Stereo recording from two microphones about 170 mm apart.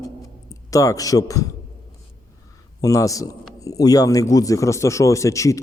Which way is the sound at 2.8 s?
20° left (ahead or behind).